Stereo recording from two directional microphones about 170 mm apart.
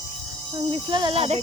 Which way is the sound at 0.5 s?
30° right (ahead or behind).